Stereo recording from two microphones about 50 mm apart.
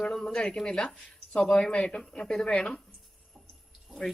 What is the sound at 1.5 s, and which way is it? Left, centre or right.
Speech, centre.